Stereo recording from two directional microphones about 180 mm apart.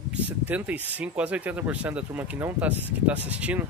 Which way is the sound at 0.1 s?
10° right (ahead or behind).